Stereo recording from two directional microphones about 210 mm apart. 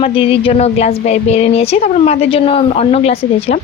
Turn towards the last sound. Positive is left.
turn(degrees=30)  # may be behind; listen again after turning